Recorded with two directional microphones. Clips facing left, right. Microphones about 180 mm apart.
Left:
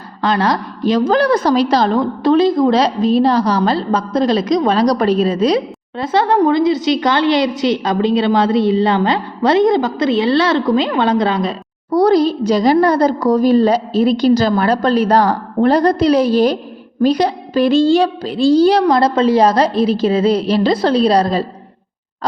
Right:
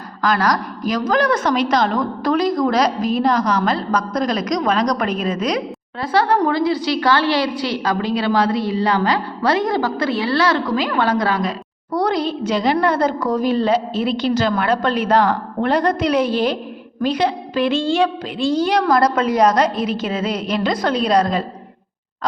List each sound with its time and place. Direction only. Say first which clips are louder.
0.2 s a woman's voice: left 2 dB; 30° left (ahead or behind)
11.9 s a woman's voice: left 8 dB; 35° left (ahead or behind)